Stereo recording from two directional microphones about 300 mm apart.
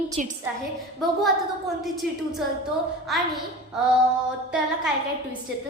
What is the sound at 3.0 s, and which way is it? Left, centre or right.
Speech, centre.